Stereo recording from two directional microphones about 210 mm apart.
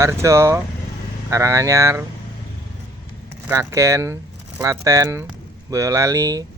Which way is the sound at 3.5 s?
15° right (ahead or behind).